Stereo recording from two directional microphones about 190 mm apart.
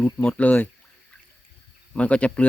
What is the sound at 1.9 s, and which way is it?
Speech, 5° left (ahead or behind).